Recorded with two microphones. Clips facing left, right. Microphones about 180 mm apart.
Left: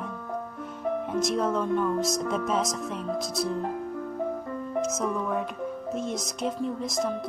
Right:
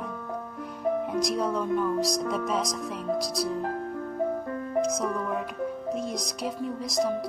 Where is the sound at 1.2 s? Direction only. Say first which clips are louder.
Left 1 dB; centre (ahead or behind).